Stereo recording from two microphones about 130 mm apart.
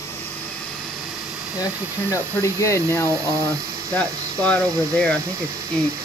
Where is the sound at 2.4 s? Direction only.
20° left (ahead or behind).